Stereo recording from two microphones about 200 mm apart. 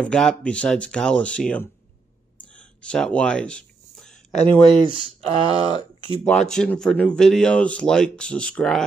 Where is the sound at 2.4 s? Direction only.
5° left (ahead or behind).